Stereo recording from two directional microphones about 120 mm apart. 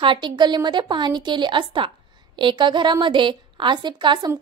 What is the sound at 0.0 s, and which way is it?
A woman's voice, 40° right (ahead or behind).